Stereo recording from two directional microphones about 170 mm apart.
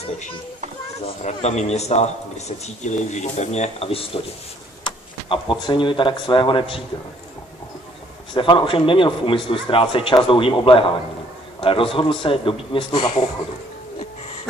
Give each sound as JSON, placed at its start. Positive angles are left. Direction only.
{"t": 1.0, "sound": "a man's voice", "side_deg": 40}
{"t": 8.4, "sound": "a man's voice", "side_deg": 30}